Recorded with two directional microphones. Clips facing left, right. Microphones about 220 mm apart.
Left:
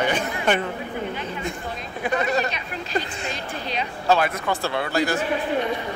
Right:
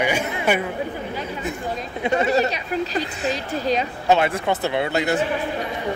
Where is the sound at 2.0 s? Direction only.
25° right (ahead or behind).